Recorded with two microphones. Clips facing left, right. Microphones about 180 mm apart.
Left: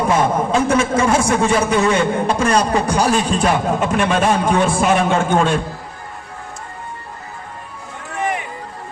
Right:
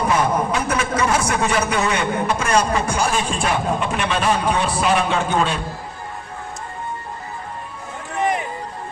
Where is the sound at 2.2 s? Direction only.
35° left (ahead or behind).